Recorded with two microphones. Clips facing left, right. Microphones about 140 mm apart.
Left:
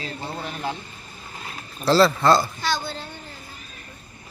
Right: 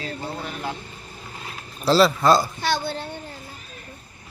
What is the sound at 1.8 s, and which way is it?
Speech, 10° right (ahead or behind).